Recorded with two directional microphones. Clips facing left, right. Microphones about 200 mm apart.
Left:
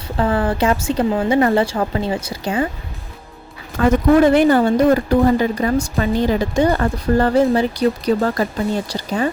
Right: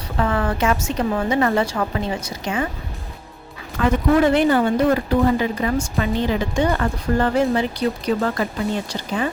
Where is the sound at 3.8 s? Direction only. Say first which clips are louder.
Left 4 dB; 40° left (ahead or behind).